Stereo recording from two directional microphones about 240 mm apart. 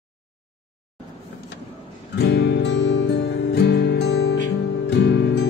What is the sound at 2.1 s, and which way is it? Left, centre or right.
Music, left.